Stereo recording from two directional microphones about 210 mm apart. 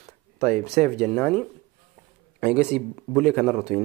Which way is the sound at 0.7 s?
30° right (ahead or behind).